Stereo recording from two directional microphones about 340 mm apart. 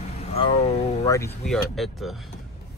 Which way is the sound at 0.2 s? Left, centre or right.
Centre.